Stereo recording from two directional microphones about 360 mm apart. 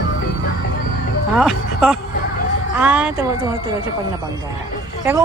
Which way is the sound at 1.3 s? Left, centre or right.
Centre.